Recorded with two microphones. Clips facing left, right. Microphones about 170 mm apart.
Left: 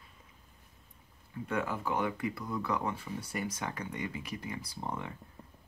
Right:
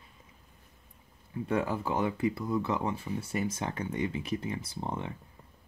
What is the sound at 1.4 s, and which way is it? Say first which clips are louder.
Speech: right 4 dB; 30° right (ahead or behind).